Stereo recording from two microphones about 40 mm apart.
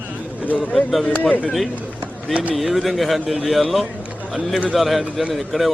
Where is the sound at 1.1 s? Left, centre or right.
Left.